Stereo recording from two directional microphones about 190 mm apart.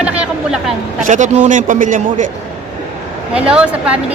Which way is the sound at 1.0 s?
40° right (ahead or behind).